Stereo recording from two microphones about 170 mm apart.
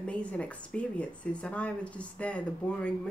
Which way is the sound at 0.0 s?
5° left (ahead or behind).